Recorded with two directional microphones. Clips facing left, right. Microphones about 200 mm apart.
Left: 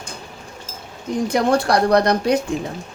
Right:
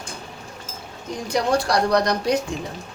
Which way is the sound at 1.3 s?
55° left (ahead or behind).